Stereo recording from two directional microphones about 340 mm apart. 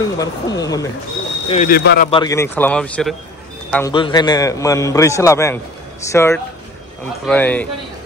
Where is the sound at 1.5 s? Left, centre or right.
Left.